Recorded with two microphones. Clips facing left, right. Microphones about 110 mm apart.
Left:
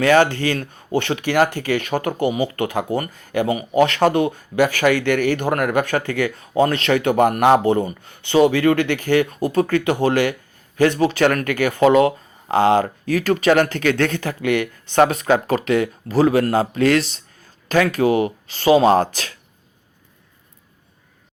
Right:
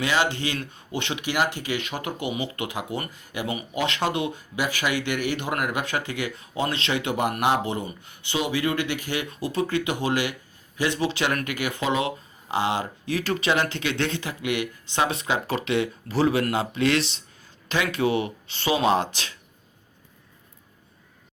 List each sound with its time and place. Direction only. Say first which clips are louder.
0.0 s speech: left 9 dB; 55° left (ahead or behind)